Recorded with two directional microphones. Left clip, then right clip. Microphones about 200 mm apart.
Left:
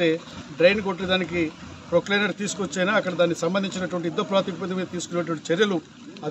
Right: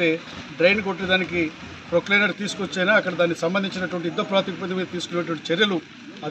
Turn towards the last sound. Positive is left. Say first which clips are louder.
# right 1 dB
turn(degrees=25)  # may be behind; listen again after turning